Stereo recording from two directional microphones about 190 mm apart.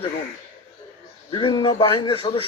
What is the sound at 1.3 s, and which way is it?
Speech, 25° left (ahead or behind).